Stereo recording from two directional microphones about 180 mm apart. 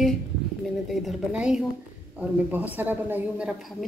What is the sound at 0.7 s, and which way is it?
A woman's voice, centre (ahead or behind).